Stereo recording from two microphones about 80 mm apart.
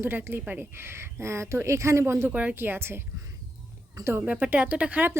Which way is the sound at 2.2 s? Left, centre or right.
Right.